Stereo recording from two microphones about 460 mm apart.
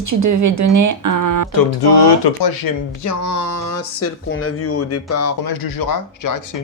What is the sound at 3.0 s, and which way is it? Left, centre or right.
Speech, left.